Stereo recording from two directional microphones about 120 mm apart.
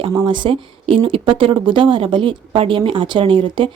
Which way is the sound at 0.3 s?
40° right (ahead or behind).